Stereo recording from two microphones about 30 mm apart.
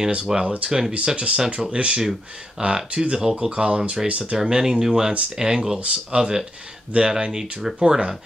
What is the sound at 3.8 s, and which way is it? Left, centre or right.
Speech, right.